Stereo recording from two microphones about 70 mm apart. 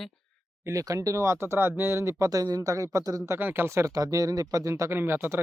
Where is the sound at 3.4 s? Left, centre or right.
Right.